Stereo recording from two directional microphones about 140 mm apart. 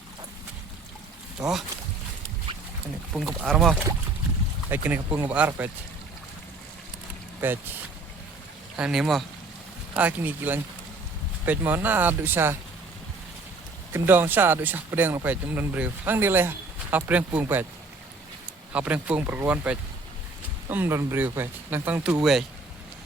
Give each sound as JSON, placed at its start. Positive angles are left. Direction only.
{"t": 1.4, "sound": "speech", "side_deg": -5}
{"t": 2.5, "sound": "a sound", "side_deg": -35}
{"t": 3.1, "sound": "speech", "side_deg": 0}
{"t": 4.7, "sound": "speech", "side_deg": -15}
{"t": 7.4, "sound": "speech", "side_deg": -15}
{"t": 8.7, "sound": "speech", "side_deg": -5}
{"t": 9.9, "sound": "speech", "side_deg": -10}
{"t": 13.9, "sound": "speech", "side_deg": -15}
{"t": 18.7, "sound": "speech", "side_deg": -10}